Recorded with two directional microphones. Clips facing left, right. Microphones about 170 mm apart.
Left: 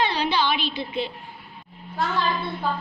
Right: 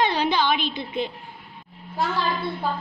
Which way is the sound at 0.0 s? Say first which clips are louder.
Right 2 dB; 50° right (ahead or behind).